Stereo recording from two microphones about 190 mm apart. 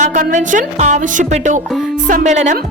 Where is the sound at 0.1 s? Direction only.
40° right (ahead or behind).